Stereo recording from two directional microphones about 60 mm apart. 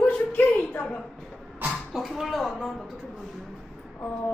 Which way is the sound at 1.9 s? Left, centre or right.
Centre.